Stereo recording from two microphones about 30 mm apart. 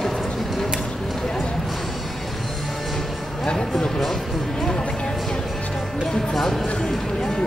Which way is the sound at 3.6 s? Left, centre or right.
Centre.